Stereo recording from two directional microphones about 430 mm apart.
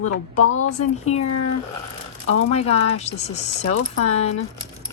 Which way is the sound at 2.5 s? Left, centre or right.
Centre.